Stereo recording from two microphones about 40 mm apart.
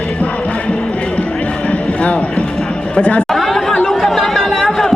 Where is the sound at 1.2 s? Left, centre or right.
Left.